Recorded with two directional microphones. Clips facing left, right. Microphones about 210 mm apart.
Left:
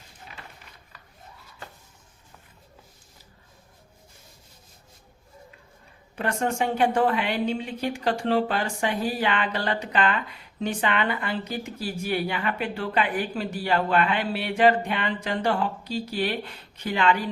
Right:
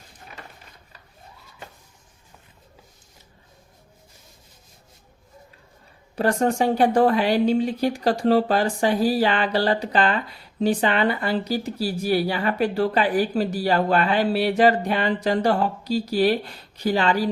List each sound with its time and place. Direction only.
6.1 s speech: 35° right (ahead or behind)